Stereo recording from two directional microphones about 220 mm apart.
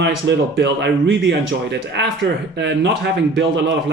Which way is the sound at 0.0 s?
50° right (ahead or behind).